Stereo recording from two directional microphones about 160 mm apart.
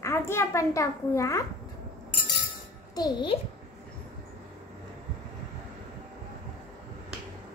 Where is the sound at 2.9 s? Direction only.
30° left (ahead or behind).